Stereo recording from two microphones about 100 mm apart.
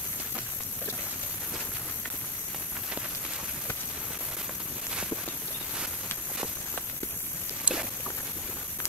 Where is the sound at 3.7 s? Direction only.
25° left (ahead or behind).